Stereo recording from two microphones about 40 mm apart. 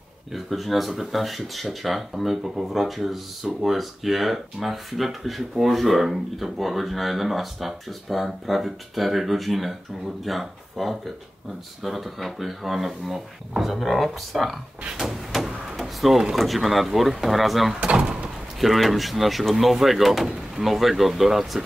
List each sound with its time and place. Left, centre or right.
0.3 s speech: centre
15.3 s a sound: centre
16.0 s speech: centre
17.8 s speech: right
18.6 s speech: centre